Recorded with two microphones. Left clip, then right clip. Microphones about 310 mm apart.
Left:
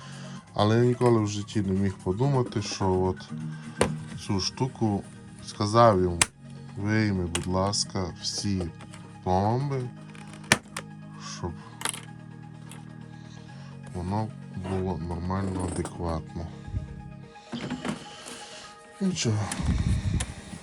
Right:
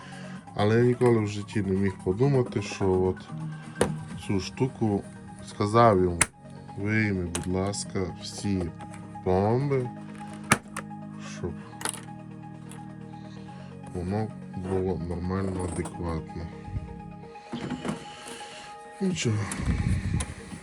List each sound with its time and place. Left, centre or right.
0.5 s speech: centre
3.8 s a sound: centre
4.6 s speech: left
5.5 s speech: centre
10.5 s music: centre
14.1 s speech: centre
17.5 s music: centre
19.0 s speech: centre